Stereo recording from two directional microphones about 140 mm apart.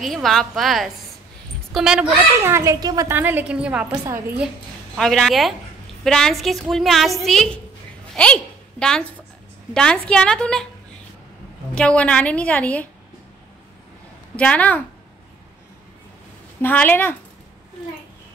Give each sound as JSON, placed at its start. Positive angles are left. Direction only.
{"t": 0.0, "sound": "a woman's voice", "side_deg": 0}
{"t": 2.3, "sound": "a child's voice", "side_deg": -20}
{"t": 3.1, "sound": "a woman's voice", "side_deg": -15}
{"t": 4.9, "sound": "a woman's voice", "side_deg": 0}
{"t": 8.1, "sound": "a sound", "side_deg": 5}
{"t": 9.8, "sound": "a woman's voice", "side_deg": 5}
{"t": 11.7, "sound": "a woman's voice", "side_deg": 10}
{"t": 14.3, "sound": "a woman's voice", "side_deg": 10}
{"t": 16.6, "sound": "a woman's voice", "side_deg": 15}